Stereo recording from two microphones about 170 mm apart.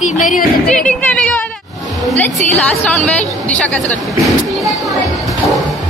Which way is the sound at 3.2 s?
10° left (ahead or behind).